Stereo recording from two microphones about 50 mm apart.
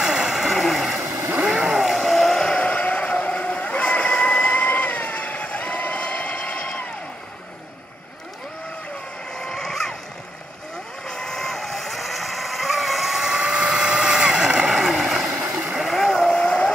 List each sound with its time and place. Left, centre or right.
0.0 s vehicle: centre
1.0 s vehicle: right
1.4 s vehicle: right
1.7 s vehicle: centre
2.4 s vehicle: left
9.3 s vehicle: centre
11.1 s vehicle: centre
14.7 s boat: centre
15.7 s vehicle: centre
16.4 s vehicle: left